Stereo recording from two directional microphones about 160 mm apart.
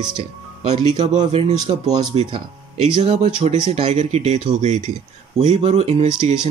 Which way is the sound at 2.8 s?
45° right (ahead or behind).